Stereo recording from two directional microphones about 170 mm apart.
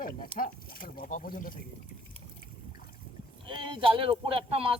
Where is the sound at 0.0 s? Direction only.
55° left (ahead or behind).